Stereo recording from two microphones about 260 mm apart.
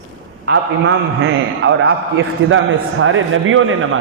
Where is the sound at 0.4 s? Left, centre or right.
Right.